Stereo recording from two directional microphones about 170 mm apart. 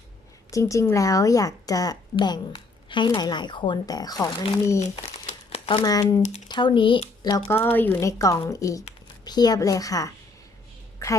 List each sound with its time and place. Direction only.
0.5 s a woman's voice: 20° left (ahead or behind)
4.8 s crumpling: 40° left (ahead or behind)
5.8 s a woman's voice: 20° left (ahead or behind)
6.2 s speech: 45° left (ahead or behind)
6.5 s speech: 30° left (ahead or behind)
7.5 s a woman's voice: 10° left (ahead or behind)